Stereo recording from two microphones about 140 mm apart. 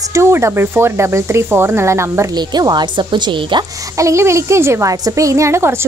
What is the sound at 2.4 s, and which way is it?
Speech, 30° right (ahead or behind).